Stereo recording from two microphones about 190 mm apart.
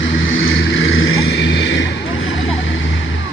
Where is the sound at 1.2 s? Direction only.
65° left (ahead or behind); by 3.2 s 80° left.